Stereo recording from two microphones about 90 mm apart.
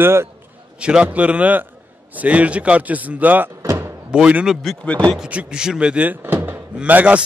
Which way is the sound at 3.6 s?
30° right (ahead or behind).